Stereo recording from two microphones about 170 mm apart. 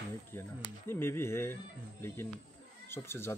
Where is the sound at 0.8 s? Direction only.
15° left (ahead or behind).